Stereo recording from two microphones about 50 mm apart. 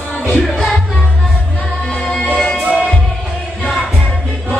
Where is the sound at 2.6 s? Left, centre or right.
Right.